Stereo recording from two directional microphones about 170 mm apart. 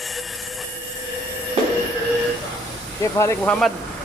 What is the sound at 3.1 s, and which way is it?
Speech, 15° left (ahead or behind).